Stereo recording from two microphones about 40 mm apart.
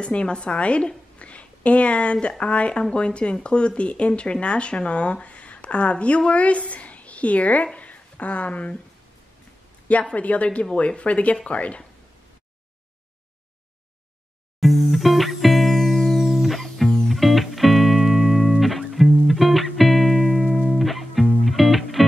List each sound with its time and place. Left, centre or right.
0.0 s a woman's voice: left
1.2 s a sound: left
2.2 s a woman's voice: left
10.1 s speech: left
14.6 s music: centre